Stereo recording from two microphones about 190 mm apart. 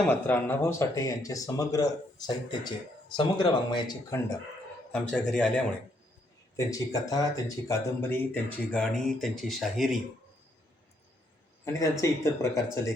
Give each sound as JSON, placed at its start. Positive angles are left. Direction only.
{"t": 0.0, "sound": "speech", "side_deg": 10}
{"t": 4.9, "sound": "speech", "side_deg": 5}
{"t": 6.6, "sound": "speech", "side_deg": 15}
{"t": 11.6, "sound": "speech", "side_deg": 15}